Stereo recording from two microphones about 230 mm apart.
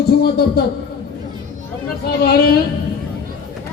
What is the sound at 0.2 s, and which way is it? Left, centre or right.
Speech, left.